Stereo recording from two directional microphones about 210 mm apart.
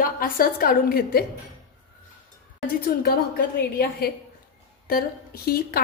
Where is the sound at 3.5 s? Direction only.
45° left (ahead or behind).